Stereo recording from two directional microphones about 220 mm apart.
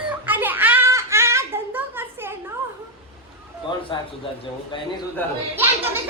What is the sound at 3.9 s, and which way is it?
Speech, 20° left (ahead or behind).